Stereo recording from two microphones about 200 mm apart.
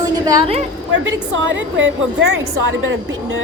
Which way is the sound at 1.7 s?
70° right (ahead or behind).